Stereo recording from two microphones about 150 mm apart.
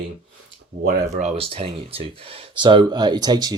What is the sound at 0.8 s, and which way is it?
Speech, 50° right (ahead or behind).